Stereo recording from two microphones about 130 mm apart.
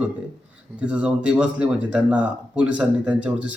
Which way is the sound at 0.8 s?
10° right (ahead or behind).